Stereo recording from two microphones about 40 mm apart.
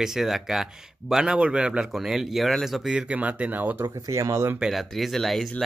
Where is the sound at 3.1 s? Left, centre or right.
Right.